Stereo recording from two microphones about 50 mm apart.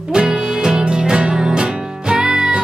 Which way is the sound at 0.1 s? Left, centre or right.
Centre.